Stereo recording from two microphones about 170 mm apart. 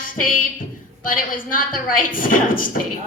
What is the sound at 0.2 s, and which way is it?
A woman's voice, 55° left (ahead or behind).